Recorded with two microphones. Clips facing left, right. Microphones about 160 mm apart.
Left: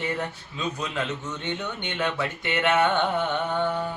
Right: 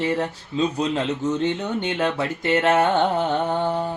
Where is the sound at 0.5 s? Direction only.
30° right (ahead or behind).